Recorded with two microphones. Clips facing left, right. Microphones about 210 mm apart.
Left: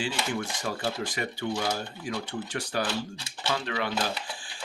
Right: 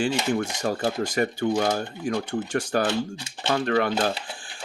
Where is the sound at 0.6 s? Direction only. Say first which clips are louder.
Right 6 dB; 45° right (ahead or behind).